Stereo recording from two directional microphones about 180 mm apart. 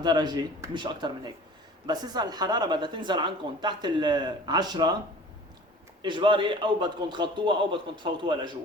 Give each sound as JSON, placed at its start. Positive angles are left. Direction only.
{"t": 0.0, "sound": "a woman's voice", "side_deg": -25}
{"t": 6.0, "sound": "a woman's voice", "side_deg": -25}